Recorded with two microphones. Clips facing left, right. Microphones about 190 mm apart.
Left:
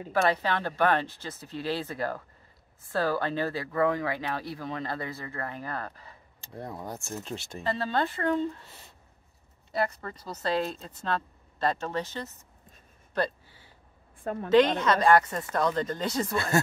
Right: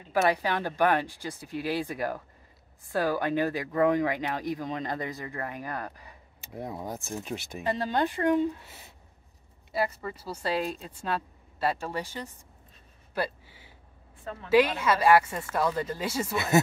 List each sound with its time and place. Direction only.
0.1 s speech: 10° right (ahead or behind)
13.1 s a sound: 10° right (ahead or behind)
14.1 s a woman's voice: 50° left (ahead or behind)
14.5 s speech: 10° right (ahead or behind)